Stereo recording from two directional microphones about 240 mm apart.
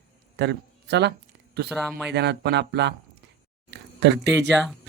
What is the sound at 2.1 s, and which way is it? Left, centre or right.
Speech, right.